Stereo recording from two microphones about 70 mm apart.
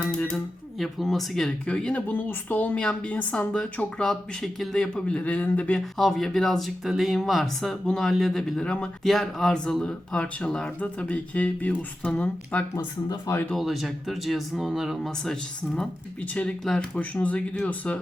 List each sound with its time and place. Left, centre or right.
0.8 s speech: centre; by 2.7 s left
2.7 s speech: centre
6.0 s speech: centre; by 12.6 s left
13.6 s speech: centre
15.2 s speech: centre